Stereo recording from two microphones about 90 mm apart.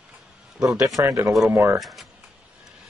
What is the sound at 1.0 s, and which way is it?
Speech, 30° right (ahead or behind).